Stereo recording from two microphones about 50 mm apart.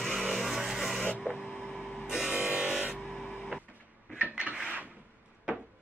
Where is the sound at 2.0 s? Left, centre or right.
Centre.